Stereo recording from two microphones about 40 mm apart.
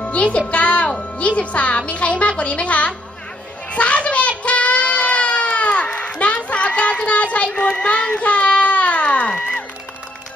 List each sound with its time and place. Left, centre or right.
0.0 s speech: left
0.8 s music: centre
1.2 s speech: left
3.7 s a sound: left
7.5 s child singing: left